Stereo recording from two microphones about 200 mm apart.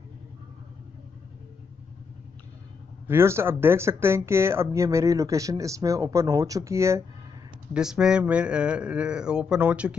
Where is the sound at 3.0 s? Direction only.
10° right (ahead or behind).